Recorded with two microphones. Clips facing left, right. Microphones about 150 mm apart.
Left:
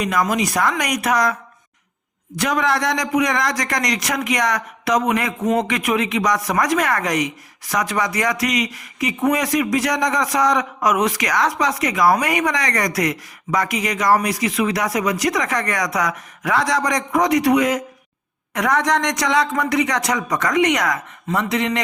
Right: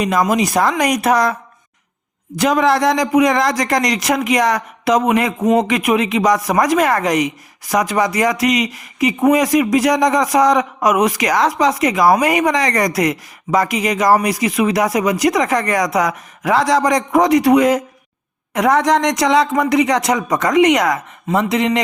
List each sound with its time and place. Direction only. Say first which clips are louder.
0.0 s speech: right 4 dB; 25° right (ahead or behind)